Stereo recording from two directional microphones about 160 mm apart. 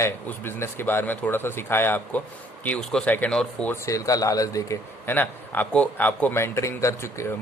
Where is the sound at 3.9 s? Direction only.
20° left (ahead or behind).